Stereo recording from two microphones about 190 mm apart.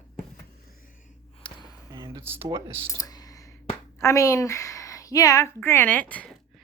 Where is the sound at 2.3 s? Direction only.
30° right (ahead or behind).